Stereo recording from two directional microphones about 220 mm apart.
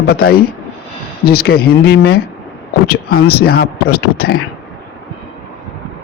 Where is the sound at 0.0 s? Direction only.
45° left (ahead or behind).